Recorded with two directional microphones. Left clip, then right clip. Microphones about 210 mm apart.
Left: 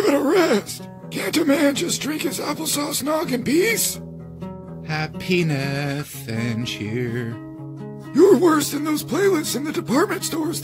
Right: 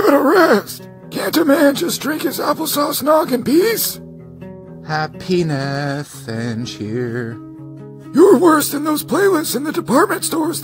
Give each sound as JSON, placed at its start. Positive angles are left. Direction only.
{"t": 0.0, "sound": "speech", "side_deg": -30}
{"t": 5.3, "sound": "speech", "side_deg": -25}
{"t": 6.3, "sound": "music", "side_deg": -5}
{"t": 8.1, "sound": "speech", "side_deg": -25}